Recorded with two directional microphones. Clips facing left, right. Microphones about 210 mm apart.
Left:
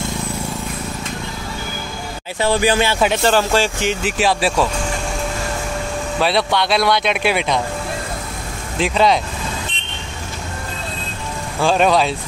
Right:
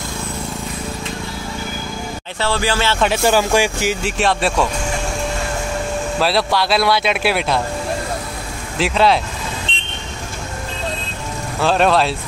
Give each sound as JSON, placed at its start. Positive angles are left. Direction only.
{"t": 2.4, "sound": "music", "side_deg": 15}
{"t": 3.1, "sound": "speech", "side_deg": -10}
{"t": 4.0, "sound": "speech", "side_deg": 0}
{"t": 6.1, "sound": "speech", "side_deg": 0}
{"t": 8.7, "sound": "speech", "side_deg": 0}
{"t": 9.7, "sound": "vehicle", "side_deg": -30}
{"t": 11.6, "sound": "speech", "side_deg": 0}